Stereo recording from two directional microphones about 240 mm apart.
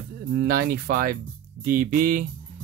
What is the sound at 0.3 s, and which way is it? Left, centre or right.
Speech, right.